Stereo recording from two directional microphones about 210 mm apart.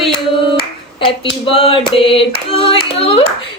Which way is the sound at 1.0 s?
25° left (ahead or behind).